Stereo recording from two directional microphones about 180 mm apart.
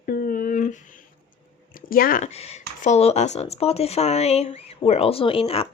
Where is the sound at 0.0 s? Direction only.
55° left (ahead or behind).